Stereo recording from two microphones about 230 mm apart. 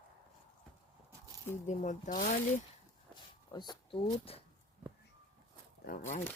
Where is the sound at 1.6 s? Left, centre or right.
Left.